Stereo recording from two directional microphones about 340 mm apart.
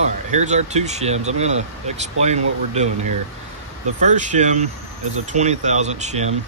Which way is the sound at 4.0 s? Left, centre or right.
Right.